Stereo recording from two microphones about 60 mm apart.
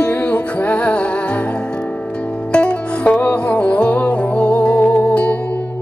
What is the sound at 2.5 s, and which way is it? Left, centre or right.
Music, left.